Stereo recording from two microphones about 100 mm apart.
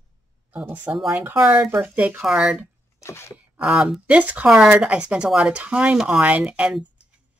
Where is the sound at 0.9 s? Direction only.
Centre (ahead or behind).